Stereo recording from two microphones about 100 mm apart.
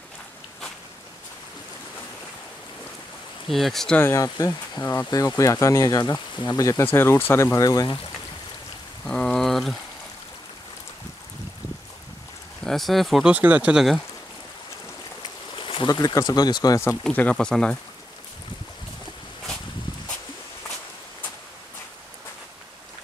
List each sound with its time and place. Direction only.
3.4 s speech: centre (ahead or behind)
4.1 s speech: 35° left (ahead or behind)
6.8 s speech: 25° left (ahead or behind)
7.5 s speech: 40° left (ahead or behind)
9.0 s rain: 5° left (ahead or behind)
12.6 s speech: centre (ahead or behind)
13.3 s speech: 15° right (ahead or behind)
15.5 s a sound: 55° left (ahead or behind)
15.9 s speech: 40° left (ahead or behind)
17.0 s speech: 15° left (ahead or behind)